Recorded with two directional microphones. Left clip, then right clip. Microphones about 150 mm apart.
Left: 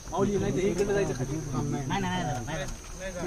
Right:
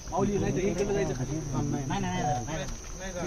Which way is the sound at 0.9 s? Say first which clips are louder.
Left 2 dB; 20° left (ahead or behind).